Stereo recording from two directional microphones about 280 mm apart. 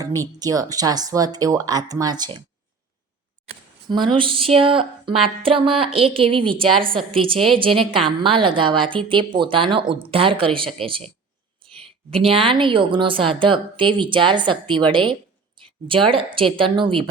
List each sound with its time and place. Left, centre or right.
0.3 s a woman's voice: centre
3.8 s a woman's voice: centre
7.3 s a woman's voice: centre
7.6 s a woman's voice: centre
12.1 s a woman's voice: centre